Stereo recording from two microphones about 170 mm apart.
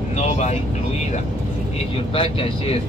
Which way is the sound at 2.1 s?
35° left (ahead or behind).